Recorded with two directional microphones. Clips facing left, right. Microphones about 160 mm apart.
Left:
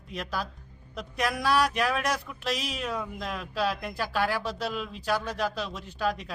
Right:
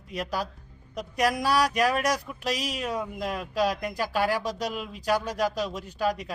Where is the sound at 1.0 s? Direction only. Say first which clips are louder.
Right 4 dB; 40° right (ahead or behind).